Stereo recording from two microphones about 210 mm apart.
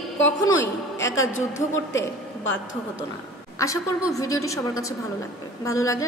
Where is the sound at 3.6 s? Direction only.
15° left (ahead or behind).